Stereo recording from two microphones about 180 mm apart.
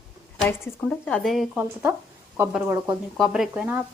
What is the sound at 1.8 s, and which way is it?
Speech, 10° right (ahead or behind).